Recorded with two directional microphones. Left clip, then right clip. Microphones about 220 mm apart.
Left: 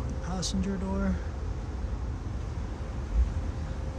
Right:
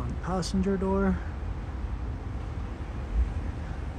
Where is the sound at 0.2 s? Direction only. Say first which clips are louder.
Right 4 dB; centre (ahead or behind).